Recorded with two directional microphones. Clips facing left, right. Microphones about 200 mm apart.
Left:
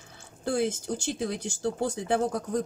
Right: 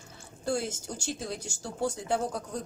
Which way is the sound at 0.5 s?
60° left (ahead or behind).